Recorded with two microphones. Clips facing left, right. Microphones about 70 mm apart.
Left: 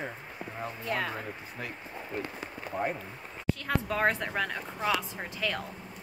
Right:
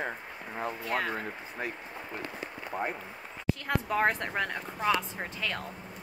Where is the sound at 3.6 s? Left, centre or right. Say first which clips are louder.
Even; centre.